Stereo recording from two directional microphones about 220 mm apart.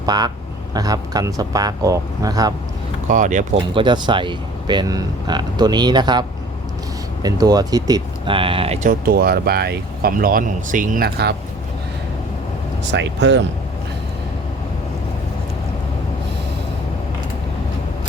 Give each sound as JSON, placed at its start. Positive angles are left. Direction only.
{"t": 0.0, "sound": "speech", "side_deg": -20}
{"t": 3.1, "sound": "speech", "side_deg": -35}
{"t": 3.8, "sound": "speech", "side_deg": -20}
{"t": 12.9, "sound": "speech", "side_deg": -55}